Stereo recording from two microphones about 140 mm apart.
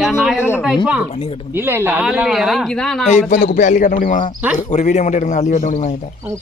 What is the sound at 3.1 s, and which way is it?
A man's voice, 60° left (ahead or behind).